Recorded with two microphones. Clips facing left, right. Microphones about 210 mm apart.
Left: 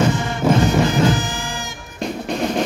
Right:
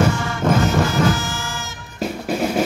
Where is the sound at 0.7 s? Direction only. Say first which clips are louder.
Left 2 dB; 15° left (ahead or behind).